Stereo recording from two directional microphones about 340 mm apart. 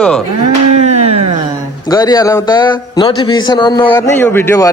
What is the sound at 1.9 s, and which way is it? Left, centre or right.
A man's voice, centre.